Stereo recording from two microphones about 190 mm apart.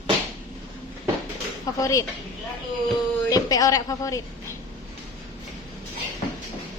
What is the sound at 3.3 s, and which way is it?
Speech, 20° left (ahead or behind).